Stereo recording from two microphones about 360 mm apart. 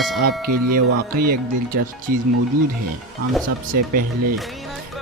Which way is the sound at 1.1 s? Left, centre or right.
Right.